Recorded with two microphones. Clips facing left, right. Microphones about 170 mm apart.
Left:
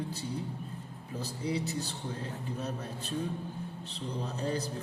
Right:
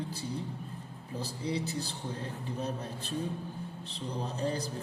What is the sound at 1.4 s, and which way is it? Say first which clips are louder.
Speech: left 1 dB; 30° right (ahead or behind).